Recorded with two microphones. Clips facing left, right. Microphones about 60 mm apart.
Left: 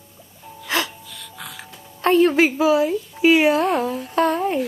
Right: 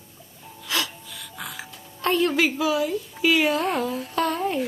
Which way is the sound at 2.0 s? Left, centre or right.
Left.